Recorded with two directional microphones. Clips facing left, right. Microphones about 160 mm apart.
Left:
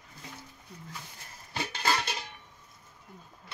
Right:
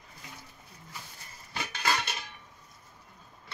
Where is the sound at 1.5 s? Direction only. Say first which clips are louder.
Left 1 dB; 30° left (ahead or behind).